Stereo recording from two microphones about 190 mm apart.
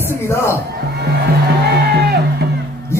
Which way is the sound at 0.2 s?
15° left (ahead or behind).